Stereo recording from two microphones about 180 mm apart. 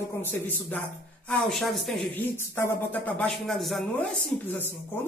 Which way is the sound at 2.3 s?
15° left (ahead or behind).